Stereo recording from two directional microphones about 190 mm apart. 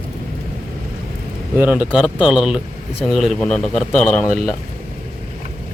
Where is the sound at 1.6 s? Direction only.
10° right (ahead or behind).